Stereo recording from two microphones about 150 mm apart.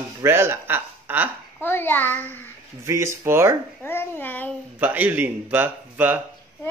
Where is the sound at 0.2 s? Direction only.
15° right (ahead or behind).